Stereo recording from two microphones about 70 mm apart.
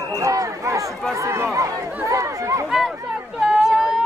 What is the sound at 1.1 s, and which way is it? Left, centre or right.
Chatter, right.